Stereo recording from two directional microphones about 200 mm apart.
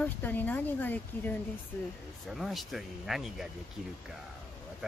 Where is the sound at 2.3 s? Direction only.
Centre (ahead or behind).